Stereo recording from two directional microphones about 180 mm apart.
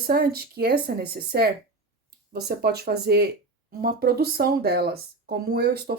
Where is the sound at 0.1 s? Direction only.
60° right (ahead or behind).